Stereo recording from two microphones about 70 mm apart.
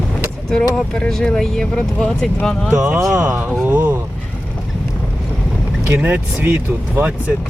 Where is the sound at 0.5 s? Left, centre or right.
Centre.